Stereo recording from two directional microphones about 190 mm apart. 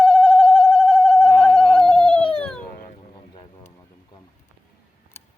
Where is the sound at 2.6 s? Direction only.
50° left (ahead or behind).